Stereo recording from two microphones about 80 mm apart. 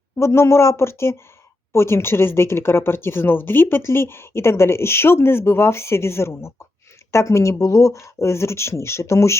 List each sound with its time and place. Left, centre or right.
0.2 s speech: left